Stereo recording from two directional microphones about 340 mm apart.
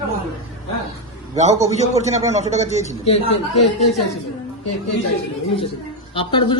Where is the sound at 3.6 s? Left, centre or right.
Centre.